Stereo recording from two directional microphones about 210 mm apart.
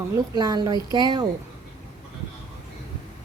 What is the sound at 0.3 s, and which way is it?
Speech, 20° right (ahead or behind).